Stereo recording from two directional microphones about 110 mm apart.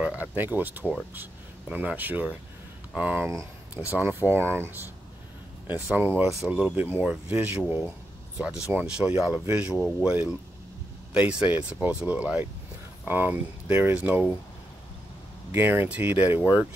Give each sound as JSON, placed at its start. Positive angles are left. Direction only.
{"t": 0.0, "sound": "speech", "side_deg": -15}
{"t": 15.5, "sound": "speech", "side_deg": -20}